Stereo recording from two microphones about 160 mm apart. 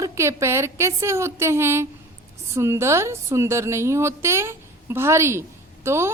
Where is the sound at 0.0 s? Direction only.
20° right (ahead or behind).